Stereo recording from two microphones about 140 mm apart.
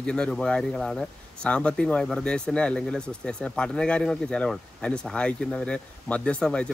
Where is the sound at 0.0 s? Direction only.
5° left (ahead or behind).